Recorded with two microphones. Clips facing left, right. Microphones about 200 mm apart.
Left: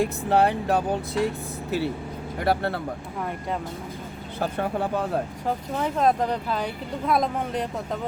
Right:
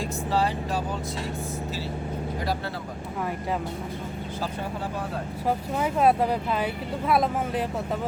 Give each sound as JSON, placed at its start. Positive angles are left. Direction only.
{"t": 0.0, "sound": "speech", "side_deg": 60}
{"t": 2.4, "sound": "speech", "side_deg": 60}
{"t": 4.4, "sound": "speech", "side_deg": 60}
{"t": 5.5, "sound": "speech", "side_deg": -5}